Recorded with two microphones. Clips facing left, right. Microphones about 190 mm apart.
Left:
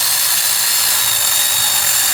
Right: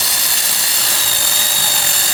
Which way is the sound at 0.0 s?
20° right (ahead or behind).